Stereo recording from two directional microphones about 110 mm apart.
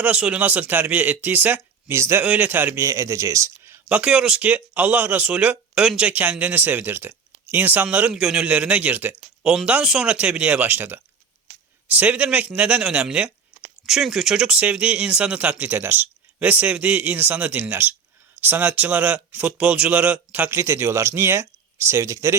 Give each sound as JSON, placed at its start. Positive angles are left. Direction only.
{"t": 0.0, "sound": "speech", "side_deg": -10}
{"t": 2.8, "sound": "speech", "side_deg": -30}
{"t": 3.8, "sound": "speech", "side_deg": -10}
{"t": 9.4, "sound": "speech", "side_deg": -5}